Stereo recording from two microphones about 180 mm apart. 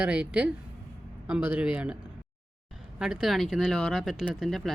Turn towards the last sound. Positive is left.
turn(degrees=0)  # may be behind; listen again after turning